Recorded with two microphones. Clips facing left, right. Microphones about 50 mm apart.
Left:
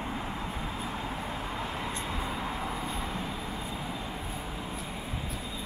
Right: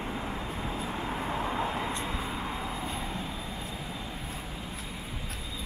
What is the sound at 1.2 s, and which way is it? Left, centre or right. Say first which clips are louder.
Vehicle: right 4 dB; centre.